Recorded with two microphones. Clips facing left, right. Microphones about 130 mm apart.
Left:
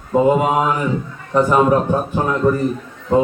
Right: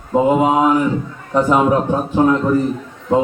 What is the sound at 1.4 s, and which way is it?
Speech, 15° right (ahead or behind).